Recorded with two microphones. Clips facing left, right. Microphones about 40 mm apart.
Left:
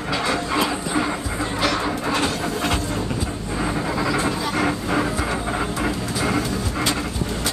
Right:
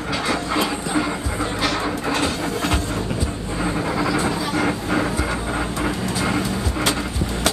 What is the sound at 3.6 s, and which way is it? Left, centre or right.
Vehicle, centre.